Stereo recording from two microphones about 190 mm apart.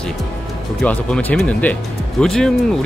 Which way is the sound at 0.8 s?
5° left (ahead or behind).